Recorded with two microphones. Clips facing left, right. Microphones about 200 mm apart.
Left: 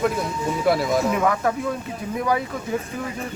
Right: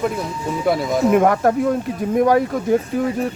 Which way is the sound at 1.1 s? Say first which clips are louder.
Right 6 dB; 50° right (ahead or behind).